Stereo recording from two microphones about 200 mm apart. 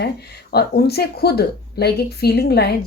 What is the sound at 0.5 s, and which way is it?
A woman's voice, 50° left (ahead or behind).